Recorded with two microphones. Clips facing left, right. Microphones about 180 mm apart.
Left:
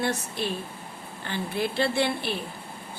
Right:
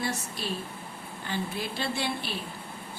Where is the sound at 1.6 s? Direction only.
60° left (ahead or behind).